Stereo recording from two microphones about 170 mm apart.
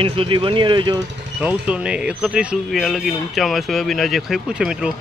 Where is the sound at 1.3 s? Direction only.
5° right (ahead or behind).